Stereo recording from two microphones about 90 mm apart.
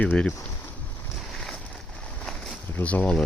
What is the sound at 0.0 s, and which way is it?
Speech, 15° left (ahead or behind).